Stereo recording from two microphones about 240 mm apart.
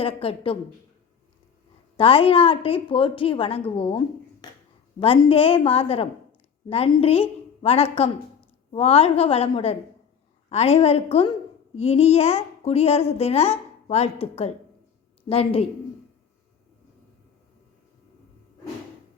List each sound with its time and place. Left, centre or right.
0.0 s a child's voice: left
2.0 s a child's voice: left